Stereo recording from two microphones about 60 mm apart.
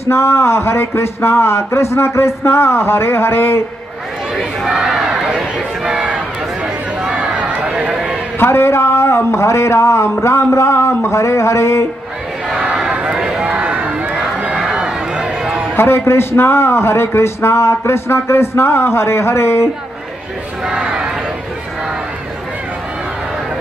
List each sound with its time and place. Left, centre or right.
0.1 s speech: left
4.6 s crowd: centre
6.0 s run: centre
8.4 s speech: left
11.1 s speech: left
12.4 s crowd: centre
12.9 s run: centre
15.7 s a man's voice: left
20.6 s crowd: centre